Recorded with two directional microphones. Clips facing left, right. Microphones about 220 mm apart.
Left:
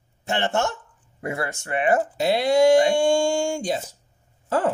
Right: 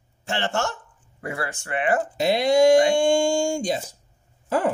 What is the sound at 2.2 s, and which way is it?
Speech, 15° right (ahead or behind).